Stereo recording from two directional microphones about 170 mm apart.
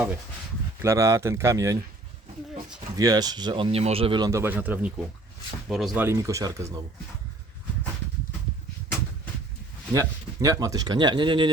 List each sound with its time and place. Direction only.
0.8 s speech: 15° right (ahead or behind)
3.0 s speech: 25° right (ahead or behind)
4.3 s speech: 15° right (ahead or behind)
6.0 s speech: 15° right (ahead or behind)
9.9 s speech: 20° right (ahead or behind)